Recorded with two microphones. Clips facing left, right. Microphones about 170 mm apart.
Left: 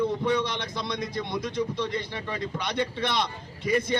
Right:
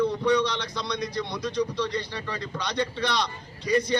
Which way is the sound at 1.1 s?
20° left (ahead or behind).